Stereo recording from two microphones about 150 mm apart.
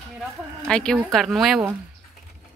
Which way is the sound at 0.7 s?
5° left (ahead or behind).